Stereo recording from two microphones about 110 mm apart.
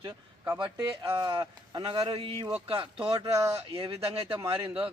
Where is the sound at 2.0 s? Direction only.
55° right (ahead or behind).